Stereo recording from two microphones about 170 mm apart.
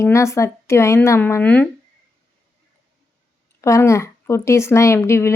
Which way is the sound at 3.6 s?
15° left (ahead or behind).